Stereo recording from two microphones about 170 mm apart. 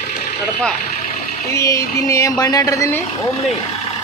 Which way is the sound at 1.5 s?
20° left (ahead or behind).